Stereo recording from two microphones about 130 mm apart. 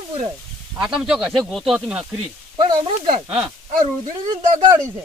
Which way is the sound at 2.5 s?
35° right (ahead or behind).